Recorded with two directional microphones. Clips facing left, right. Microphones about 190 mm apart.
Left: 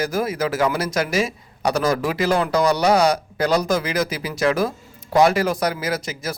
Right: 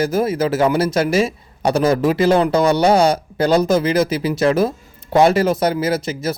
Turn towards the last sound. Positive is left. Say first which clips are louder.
# right 6 dB
turn(degrees=-25)  # may be behind; listen again after turning